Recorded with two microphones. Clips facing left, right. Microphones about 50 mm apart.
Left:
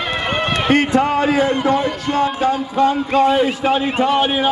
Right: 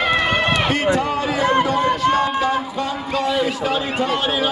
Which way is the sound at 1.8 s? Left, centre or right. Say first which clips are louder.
Right 3 dB; right.